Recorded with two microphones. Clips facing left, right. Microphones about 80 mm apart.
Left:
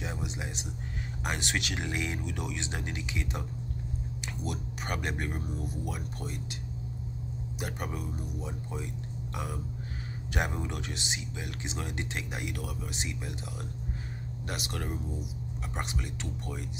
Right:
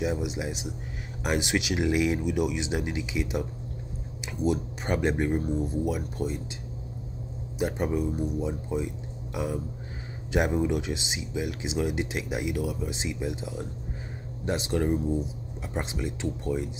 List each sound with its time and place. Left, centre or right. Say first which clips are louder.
0.0 s speech: right 8 dB; centre
4.5 s speech: right 9 dB; right
7.5 s speech: right 11 dB; right